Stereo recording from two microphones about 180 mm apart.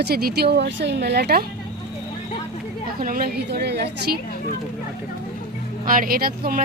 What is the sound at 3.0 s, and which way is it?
A woman's voice, 50° right (ahead or behind).